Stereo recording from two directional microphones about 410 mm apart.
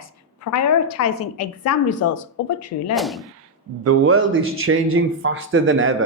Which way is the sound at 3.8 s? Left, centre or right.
Right.